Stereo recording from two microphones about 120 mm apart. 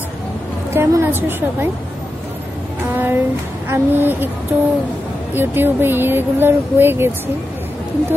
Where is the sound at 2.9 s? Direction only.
15° right (ahead or behind).